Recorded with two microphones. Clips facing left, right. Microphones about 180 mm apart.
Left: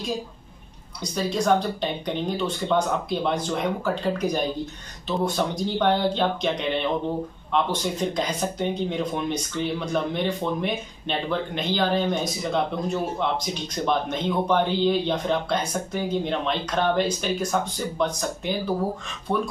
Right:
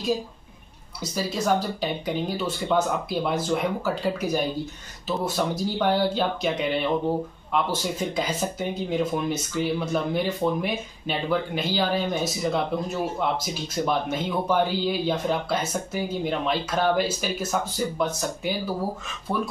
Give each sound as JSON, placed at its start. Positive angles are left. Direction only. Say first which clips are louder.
{"t": 1.0, "sound": "speech", "louder": "left 2 dB", "side_deg": -5}